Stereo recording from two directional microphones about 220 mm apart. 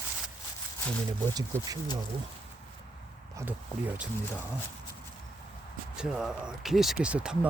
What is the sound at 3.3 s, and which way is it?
Speech, 10° right (ahead or behind).